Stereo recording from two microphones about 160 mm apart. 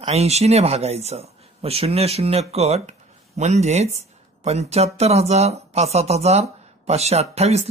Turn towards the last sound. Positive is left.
turn(degrees=-40)  # may be behind; listen again after turning